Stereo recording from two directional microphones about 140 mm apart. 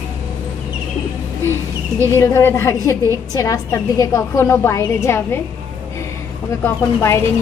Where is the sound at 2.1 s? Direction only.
20° left (ahead or behind).